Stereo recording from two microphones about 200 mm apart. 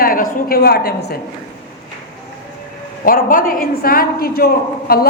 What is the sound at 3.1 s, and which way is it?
A woman's voice, 45° left (ahead or behind).